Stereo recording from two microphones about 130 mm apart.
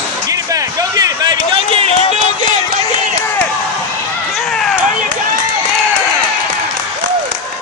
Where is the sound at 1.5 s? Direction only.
45° right (ahead or behind).